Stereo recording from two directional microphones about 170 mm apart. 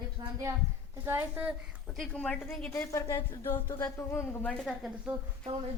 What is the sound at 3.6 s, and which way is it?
Female singing, 25° left (ahead or behind).